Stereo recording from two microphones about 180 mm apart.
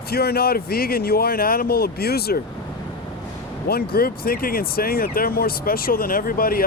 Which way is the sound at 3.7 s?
55° left (ahead or behind).